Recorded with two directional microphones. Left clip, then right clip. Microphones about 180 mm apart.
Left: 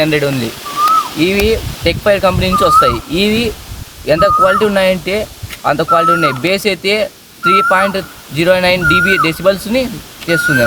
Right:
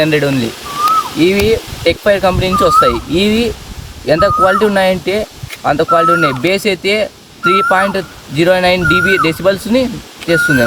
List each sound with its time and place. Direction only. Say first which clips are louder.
0.0 s speech: right 1 dB; 20° left (ahead or behind)